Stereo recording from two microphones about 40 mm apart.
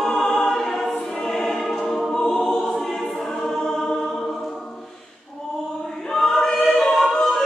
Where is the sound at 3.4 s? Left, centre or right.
Centre.